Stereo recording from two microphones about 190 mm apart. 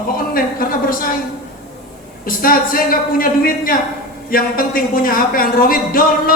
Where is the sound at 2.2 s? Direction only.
50° left (ahead or behind).